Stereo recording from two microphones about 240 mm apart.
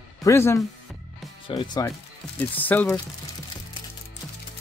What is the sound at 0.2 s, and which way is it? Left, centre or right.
Speech, centre.